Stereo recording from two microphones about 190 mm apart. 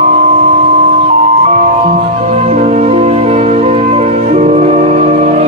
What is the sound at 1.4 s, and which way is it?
Music, 35° right (ahead or behind).